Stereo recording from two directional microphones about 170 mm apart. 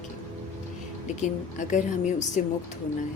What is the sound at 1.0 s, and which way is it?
A woman's voice, 45° left (ahead or behind).